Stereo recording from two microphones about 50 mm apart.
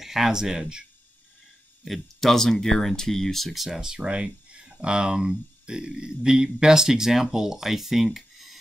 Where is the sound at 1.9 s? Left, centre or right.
Centre.